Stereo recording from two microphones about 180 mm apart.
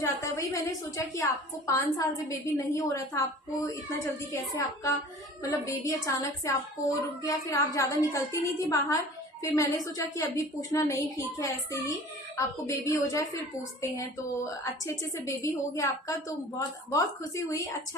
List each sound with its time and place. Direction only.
0.0 s a woman's voice: 15° left (ahead or behind)
14.6 s a woman's voice: 15° left (ahead or behind)